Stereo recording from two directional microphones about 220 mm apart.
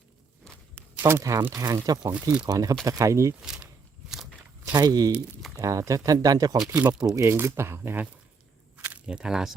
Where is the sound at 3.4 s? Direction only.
Centre (ahead or behind).